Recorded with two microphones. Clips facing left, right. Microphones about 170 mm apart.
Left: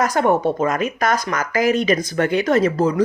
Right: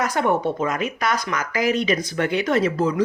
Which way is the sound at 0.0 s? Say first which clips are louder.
Left 4 dB; 45° left (ahead or behind).